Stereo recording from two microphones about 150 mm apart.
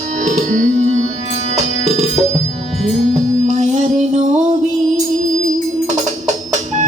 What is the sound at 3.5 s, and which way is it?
Music, 55° right (ahead or behind).